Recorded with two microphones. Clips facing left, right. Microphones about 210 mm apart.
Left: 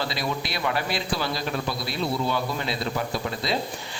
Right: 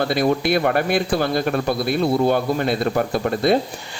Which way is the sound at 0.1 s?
55° right (ahead or behind).